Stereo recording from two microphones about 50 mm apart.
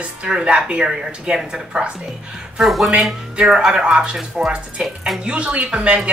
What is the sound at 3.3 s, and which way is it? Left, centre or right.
A woman's voice, centre.